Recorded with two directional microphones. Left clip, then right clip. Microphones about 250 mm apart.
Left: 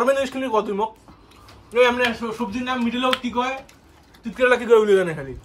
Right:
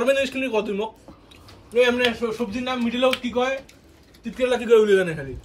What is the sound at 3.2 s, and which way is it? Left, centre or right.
Speech, centre.